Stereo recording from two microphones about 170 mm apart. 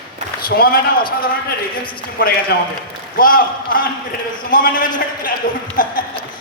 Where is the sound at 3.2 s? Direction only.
55° left (ahead or behind).